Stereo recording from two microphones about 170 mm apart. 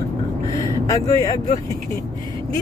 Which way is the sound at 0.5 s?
20° left (ahead or behind).